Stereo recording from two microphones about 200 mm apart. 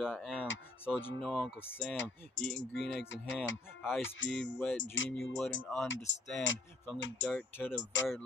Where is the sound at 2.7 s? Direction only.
65° left (ahead or behind).